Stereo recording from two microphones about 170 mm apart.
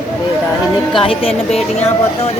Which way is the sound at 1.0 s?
35° left (ahead or behind).